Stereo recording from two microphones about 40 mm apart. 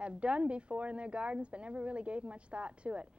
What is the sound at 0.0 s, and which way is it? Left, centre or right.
A woman's voice, right.